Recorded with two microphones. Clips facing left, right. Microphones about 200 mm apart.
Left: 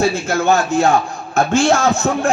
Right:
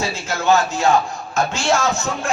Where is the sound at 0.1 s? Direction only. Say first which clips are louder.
Left 2 dB; 55° left (ahead or behind).